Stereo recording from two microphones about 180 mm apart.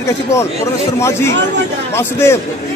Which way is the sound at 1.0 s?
15° left (ahead or behind).